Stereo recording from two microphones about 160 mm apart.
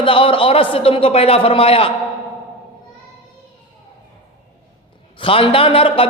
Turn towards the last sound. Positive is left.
turn(degrees=35)  # may be behind; listen again after turning